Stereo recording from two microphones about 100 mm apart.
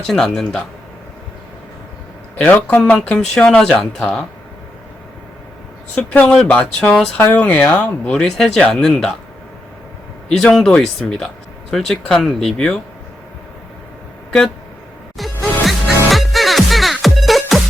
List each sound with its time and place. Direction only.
0.1 s speech: 5° left (ahead or behind)
2.3 s speech: 15° left (ahead or behind)
5.9 s speech: 10° left (ahead or behind)
10.2 s speech: 5° left (ahead or behind)
15.2 s music: centre (ahead or behind)